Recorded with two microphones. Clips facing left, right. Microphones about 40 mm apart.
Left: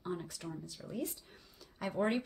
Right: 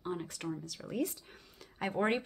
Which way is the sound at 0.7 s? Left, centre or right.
Right.